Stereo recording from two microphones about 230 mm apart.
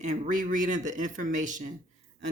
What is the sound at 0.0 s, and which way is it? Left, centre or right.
Speech, right.